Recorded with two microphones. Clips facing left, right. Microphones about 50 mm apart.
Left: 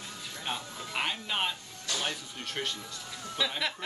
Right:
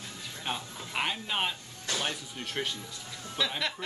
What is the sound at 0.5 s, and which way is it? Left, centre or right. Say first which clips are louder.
Speech: right 1 dB; centre.